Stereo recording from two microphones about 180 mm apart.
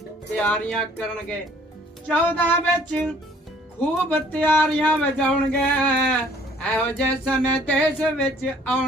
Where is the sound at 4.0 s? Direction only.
10° left (ahead or behind).